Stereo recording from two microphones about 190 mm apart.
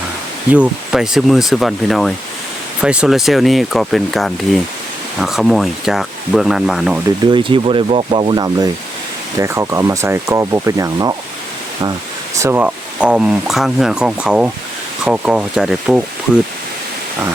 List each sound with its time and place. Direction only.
0.5 s speech: 5° right (ahead or behind)
7.3 s speech: 25° right (ahead or behind)
12.4 s speech: 10° right (ahead or behind)